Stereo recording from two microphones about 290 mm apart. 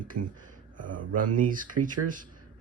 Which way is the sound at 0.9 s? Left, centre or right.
Right.